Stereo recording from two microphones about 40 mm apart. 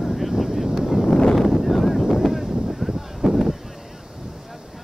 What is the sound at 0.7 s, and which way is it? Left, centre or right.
Wind noise, centre.